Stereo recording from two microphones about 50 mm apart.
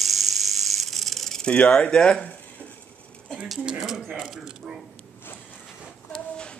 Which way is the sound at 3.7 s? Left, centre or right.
Centre.